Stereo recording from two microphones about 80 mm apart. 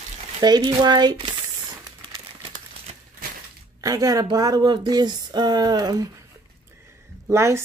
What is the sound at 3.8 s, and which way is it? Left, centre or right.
A woman's voice, right.